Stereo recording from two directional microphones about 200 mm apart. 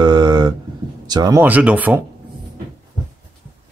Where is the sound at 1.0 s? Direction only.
20° right (ahead or behind).